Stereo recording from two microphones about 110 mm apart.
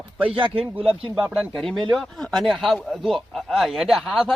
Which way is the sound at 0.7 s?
55° right (ahead or behind).